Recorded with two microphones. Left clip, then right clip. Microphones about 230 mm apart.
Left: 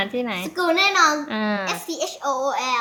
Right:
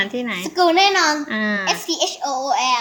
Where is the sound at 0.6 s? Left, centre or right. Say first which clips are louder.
Right 4 dB; left.